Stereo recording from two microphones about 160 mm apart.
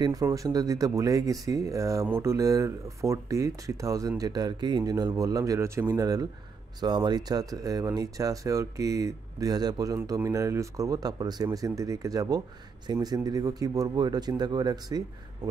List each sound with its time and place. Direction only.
0.0 s speech: 20° right (ahead or behind)